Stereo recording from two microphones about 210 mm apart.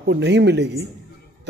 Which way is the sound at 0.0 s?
55° right (ahead or behind).